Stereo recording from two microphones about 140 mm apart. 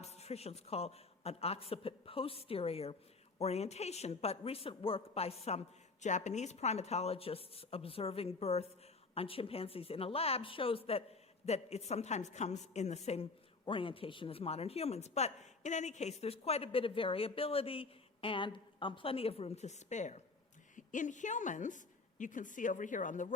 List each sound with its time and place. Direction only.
0.0 s speech: 50° left (ahead or behind)
13.7 s a woman's voice: 40° left (ahead or behind); by 23.3 s 65° left (ahead or behind)